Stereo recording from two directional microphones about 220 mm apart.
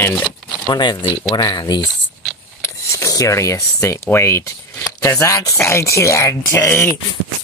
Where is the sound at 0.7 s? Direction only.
20° left (ahead or behind).